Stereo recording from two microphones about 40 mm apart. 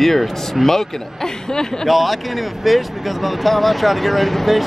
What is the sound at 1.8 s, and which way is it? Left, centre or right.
Speech, centre.